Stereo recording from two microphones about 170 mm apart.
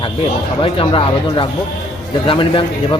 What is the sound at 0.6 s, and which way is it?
Speech, 30° left (ahead or behind).